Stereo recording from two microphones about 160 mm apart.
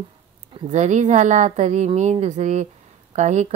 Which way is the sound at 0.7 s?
45° right (ahead or behind).